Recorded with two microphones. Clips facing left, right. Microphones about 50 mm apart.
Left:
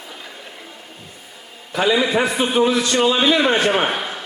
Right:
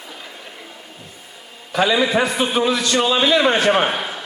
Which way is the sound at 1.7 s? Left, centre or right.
Right.